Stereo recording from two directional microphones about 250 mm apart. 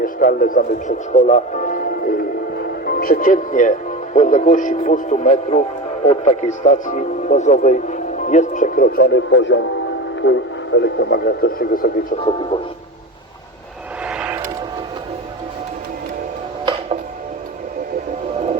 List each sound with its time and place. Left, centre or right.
0.0 s speech: left
14.1 s vehicle: centre